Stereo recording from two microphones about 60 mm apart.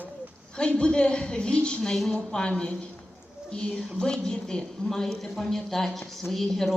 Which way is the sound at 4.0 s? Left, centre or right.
Centre.